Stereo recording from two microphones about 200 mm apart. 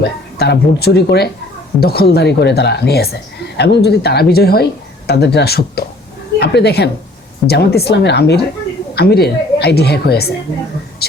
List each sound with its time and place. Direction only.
0.0 s a woman's voice: 55° left (ahead or behind)